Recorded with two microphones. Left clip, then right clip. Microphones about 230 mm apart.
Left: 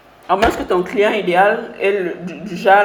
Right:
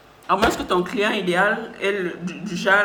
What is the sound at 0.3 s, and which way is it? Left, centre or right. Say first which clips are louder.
A man's voice: left 4 dB; right.